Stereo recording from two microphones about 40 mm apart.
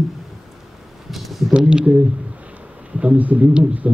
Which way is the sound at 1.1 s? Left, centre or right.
Centre.